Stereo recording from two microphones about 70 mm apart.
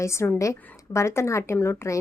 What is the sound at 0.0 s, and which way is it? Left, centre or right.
A woman's voice, left.